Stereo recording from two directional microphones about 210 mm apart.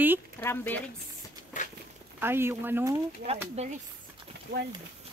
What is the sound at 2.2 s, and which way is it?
Speech, 10° right (ahead or behind).